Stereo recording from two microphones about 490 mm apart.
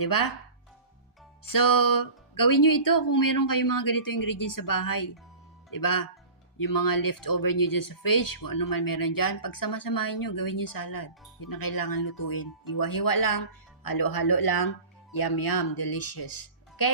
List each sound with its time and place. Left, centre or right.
0.0 s speech: left
1.5 s speech: left